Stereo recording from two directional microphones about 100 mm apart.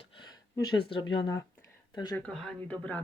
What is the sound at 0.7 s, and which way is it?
Speech, 60° left (ahead or behind).